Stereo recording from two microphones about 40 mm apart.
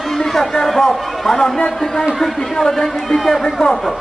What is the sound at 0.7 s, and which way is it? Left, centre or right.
A man's voice, centre.